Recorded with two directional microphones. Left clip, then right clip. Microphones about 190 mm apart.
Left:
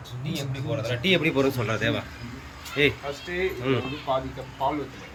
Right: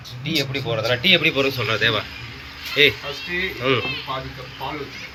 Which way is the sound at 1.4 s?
25° left (ahead or behind).